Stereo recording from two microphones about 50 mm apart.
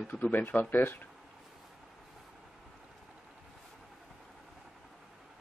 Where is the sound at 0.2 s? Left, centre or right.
Left.